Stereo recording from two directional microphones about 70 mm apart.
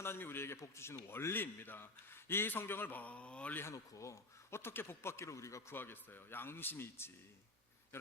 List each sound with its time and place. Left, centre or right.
0.0 s a man's voice: left; by 3.6 s centre
3.6 s speech: left
5.7 s a man's voice: left